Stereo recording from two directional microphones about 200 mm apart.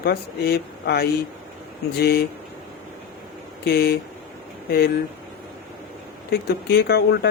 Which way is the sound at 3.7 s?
50° left (ahead or behind).